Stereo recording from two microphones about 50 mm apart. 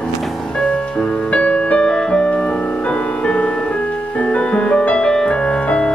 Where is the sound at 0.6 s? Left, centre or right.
Centre.